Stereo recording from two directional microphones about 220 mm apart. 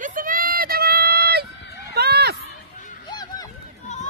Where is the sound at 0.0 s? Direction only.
40° right (ahead or behind).